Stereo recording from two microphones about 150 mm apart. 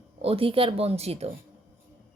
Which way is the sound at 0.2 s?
40° right (ahead or behind).